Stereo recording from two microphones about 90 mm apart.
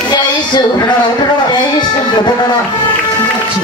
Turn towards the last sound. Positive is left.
turn(degrees=55)  # may be behind; listen again after turning